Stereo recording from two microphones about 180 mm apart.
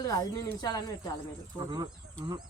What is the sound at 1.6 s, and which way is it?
Speech, 20° right (ahead or behind).